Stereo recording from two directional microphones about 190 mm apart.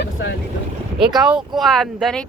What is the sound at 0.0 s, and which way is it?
Boat, 70° left (ahead or behind).